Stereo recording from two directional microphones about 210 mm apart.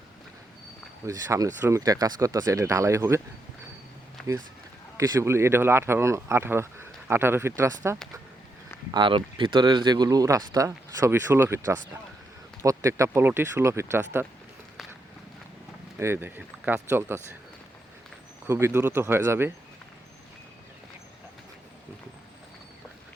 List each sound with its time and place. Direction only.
1.0 s speech: 15° right (ahead or behind)
4.2 s a sound: 5° left (ahead or behind)
4.9 s speech: 15° right (ahead or behind)
16.0 s speech: 10° right (ahead or behind)
18.4 s speech: 10° right (ahead or behind)